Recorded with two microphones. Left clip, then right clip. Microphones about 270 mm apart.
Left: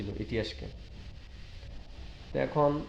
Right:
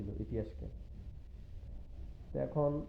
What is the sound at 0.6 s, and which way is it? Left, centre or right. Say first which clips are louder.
Speech: left 7 dB; centre.